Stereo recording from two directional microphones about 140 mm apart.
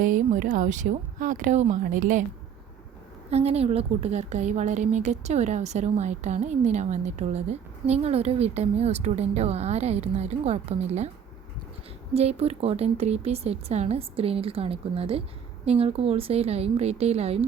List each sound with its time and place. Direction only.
0.0 s speech: 70° right (ahead or behind)
3.2 s a woman's voice: 50° right (ahead or behind)
12.1 s a woman's voice: 45° right (ahead or behind)